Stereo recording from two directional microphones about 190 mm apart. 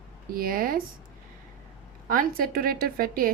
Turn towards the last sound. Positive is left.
turn(degrees=-50)  # may be behind; listen again after turning